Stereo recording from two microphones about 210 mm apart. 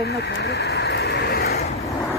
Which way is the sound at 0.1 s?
55° left (ahead or behind).